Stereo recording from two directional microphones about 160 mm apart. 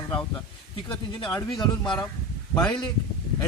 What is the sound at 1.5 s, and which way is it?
Speech, 25° left (ahead or behind).